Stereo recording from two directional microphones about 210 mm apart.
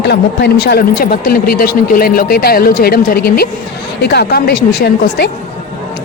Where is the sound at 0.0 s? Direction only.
55° left (ahead or behind).